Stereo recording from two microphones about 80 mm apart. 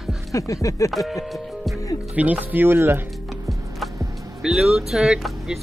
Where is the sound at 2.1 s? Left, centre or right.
Centre.